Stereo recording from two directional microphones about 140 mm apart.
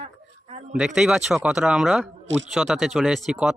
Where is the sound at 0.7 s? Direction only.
5° right (ahead or behind).